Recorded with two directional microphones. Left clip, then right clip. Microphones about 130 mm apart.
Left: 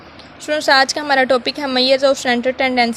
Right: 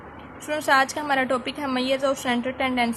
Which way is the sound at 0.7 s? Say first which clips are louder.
Left 6 dB; 60° left (ahead or behind).